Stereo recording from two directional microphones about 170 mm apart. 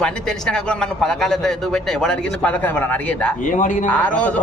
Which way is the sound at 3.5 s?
50° left (ahead or behind).